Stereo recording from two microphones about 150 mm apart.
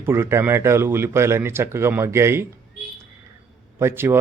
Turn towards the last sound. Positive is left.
turn(degrees=-15)  # may be behind; listen again after turning